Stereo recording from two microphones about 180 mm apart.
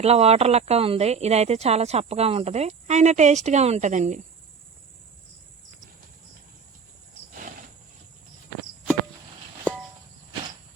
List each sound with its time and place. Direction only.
0.0 s speech: 35° right (ahead or behind)